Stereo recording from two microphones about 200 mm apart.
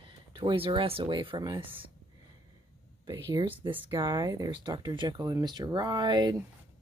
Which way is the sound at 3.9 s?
20° right (ahead or behind).